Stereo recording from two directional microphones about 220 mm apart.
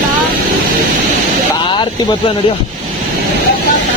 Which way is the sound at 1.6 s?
20° left (ahead or behind).